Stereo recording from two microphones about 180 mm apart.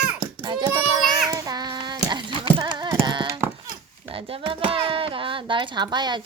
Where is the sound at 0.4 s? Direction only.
25° right (ahead or behind).